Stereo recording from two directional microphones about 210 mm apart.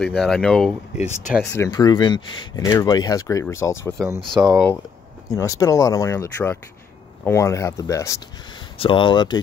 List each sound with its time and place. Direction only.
0.0 s speech: centre (ahead or behind)
0.9 s speech: 35° left (ahead or behind)
1.5 s speech: 15° left (ahead or behind)
4.3 s speech: 20° right (ahead or behind)
5.3 s speech: 15° left (ahead or behind)